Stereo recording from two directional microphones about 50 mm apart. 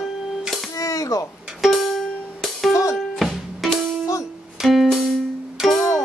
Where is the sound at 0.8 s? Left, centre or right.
Left.